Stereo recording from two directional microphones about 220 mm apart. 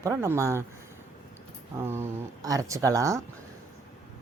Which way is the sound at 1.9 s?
15° right (ahead or behind).